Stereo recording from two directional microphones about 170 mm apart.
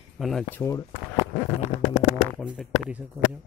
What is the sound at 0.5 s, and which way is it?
Speech, 20° left (ahead or behind).